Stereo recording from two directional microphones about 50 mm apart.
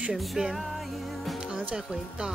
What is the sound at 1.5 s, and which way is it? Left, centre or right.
Music, right.